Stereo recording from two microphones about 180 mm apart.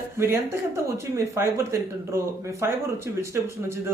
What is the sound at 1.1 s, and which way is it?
Speech, 15° right (ahead or behind).